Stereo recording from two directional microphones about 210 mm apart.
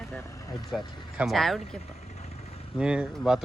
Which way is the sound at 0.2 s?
15° left (ahead or behind).